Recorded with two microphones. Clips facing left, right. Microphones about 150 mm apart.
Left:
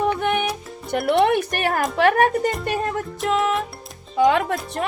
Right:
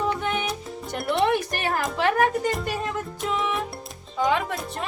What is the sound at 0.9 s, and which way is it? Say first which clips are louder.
Speech: left 5 dB; 60° left (ahead or behind).